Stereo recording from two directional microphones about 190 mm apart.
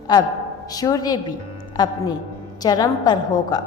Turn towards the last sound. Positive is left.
turn(degrees=20)  # may be behind; listen again after turning